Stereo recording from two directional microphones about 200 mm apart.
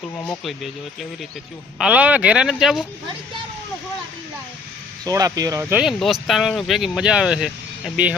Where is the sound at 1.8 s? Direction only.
5° right (ahead or behind).